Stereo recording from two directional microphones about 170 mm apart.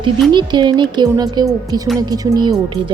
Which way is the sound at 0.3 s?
25° right (ahead or behind).